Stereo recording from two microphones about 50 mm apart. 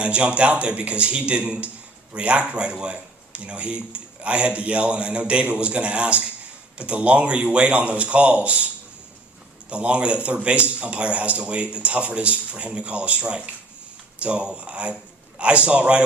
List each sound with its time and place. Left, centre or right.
0.0 s speech: right